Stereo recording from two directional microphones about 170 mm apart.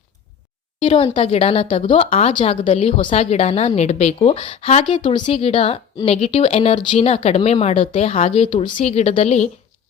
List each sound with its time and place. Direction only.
0.8 s a woman's voice: 30° left (ahead or behind)